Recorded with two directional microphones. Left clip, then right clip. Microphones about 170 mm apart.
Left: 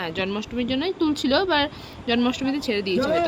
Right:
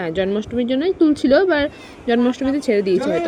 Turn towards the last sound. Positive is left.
turn(degrees=-15)  # may be behind; listen again after turning